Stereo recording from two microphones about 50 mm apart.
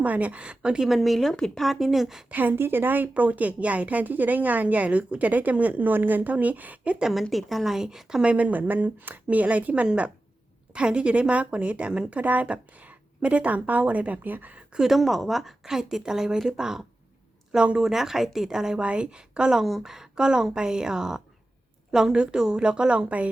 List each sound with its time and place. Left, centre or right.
0.0 s a woman's voice: right
0.9 s a woman's voice: centre
1.6 s a woman's voice: centre
2.3 s speech: right
7.1 s a woman's voice: centre
8.2 s a woman's voice: right
12.2 s speech: right
14.7 s speech: centre
14.9 s a woman's voice: centre; by 23.3 s right